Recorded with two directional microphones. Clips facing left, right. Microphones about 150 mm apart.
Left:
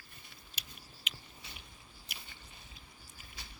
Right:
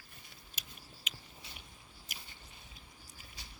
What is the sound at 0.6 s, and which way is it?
Scissors, 45° right (ahead or behind).